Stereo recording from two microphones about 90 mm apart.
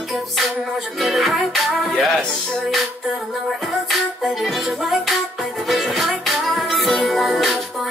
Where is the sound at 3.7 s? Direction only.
Centre (ahead or behind).